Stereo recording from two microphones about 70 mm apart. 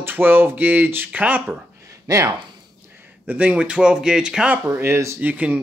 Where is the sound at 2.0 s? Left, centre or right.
Right.